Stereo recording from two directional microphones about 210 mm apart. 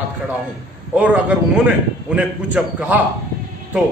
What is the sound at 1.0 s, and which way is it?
A man's voice, 5° right (ahead or behind).